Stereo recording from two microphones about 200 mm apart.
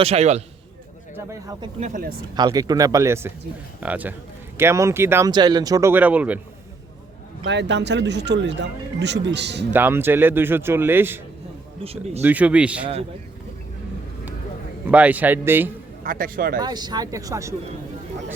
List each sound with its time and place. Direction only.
0.0 s a man's voice: 30° right (ahead or behind)
1.1 s speech: 15° right (ahead or behind)
1.8 s speech: 45° right (ahead or behind)
2.3 s speech: 20° right (ahead or behind)
7.4 s speech: 60° right (ahead or behind)
9.7 s speech: 10° right (ahead or behind)
11.8 s speech: 30° right (ahead or behind)
12.2 s speech: 10° right (ahead or behind)
14.8 s speech: 5° right (ahead or behind)
16.0 s speech: 45° right (ahead or behind)
16.6 s speech: 20° right (ahead or behind)